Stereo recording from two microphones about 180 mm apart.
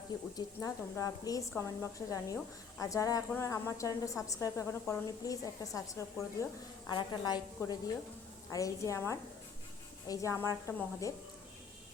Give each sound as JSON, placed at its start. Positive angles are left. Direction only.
{"t": 0.3, "sound": "a woman's voice", "side_deg": 20}